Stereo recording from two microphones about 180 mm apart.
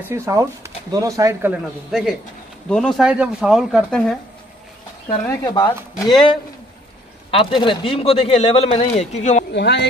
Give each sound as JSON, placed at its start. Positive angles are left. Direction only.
{"t": 0.1, "sound": "speech", "side_deg": -15}
{"t": 1.5, "sound": "speech", "side_deg": 0}
{"t": 5.3, "sound": "speech", "side_deg": 20}
{"t": 9.5, "sound": "speech", "side_deg": 70}